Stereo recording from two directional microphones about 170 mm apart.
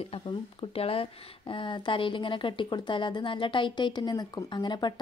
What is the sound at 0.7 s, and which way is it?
Speech, 35° left (ahead or behind).